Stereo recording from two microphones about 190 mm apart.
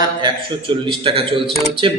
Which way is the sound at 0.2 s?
25° right (ahead or behind).